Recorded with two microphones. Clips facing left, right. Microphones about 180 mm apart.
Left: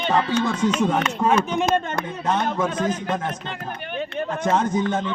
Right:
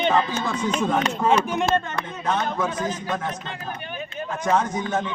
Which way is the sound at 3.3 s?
60° left (ahead or behind).